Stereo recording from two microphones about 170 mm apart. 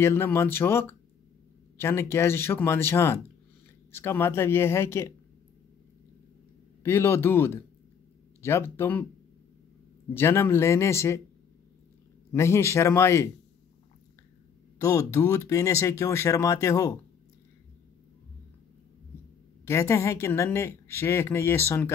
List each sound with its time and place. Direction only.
0.0 s a woman's voice: 15° left (ahead or behind)
6.8 s a woman's voice: 15° left (ahead or behind)
10.1 s a woman's voice: 15° left (ahead or behind)
12.3 s a woman's voice: 15° left (ahead or behind)
14.8 s a woman's voice: 20° left (ahead or behind)
19.6 s a woman's voice: 15° left (ahead or behind)